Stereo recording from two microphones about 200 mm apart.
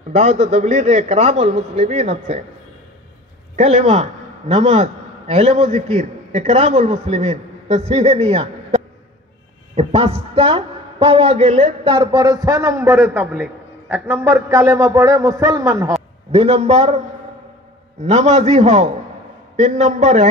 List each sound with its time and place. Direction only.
0.1 s a man's voice: 35° right (ahead or behind)
3.5 s a man's voice: 35° right (ahead or behind); by 15.9 s 15° right (ahead or behind)
16.3 s a man's voice: 30° right (ahead or behind)
18.0 s a man's voice: 35° right (ahead or behind)